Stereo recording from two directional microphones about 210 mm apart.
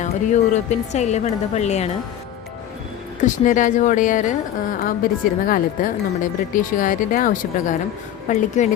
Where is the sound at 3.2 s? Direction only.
40° left (ahead or behind).